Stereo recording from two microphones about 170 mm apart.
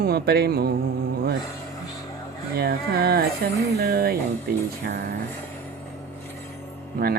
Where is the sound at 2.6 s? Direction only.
70° right (ahead or behind).